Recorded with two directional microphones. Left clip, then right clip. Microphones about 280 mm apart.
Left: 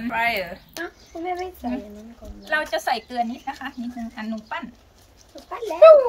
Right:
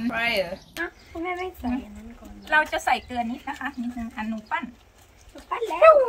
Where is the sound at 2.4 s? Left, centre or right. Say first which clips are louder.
Right 2 dB; centre.